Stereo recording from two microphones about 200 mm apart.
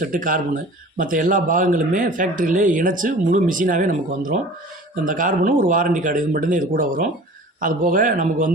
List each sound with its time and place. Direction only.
0.0 s speech: 40° right (ahead or behind)